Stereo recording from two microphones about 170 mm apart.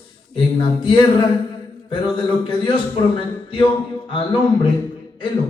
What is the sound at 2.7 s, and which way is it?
Speech, 30° left (ahead or behind).